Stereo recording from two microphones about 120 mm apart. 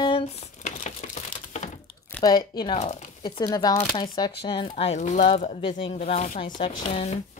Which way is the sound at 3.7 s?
45° left (ahead or behind).